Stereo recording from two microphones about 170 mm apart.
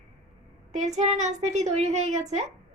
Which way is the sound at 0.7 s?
40° right (ahead or behind).